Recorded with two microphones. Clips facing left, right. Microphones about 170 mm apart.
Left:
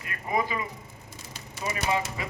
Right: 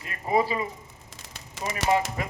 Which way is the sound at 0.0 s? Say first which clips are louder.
Right 4 dB; 30° right (ahead or behind).